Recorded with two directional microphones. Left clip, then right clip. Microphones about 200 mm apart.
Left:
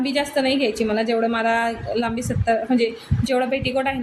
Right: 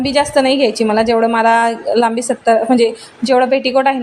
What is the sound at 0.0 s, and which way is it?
A woman's voice, 25° right (ahead or behind).